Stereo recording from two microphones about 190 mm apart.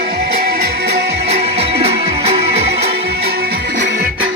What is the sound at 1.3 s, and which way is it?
Music, 35° right (ahead or behind).